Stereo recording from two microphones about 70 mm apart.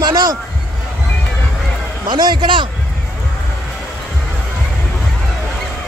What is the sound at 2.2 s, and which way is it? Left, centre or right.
Speech, right.